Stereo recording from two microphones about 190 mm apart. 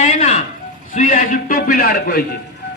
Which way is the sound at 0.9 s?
45° left (ahead or behind).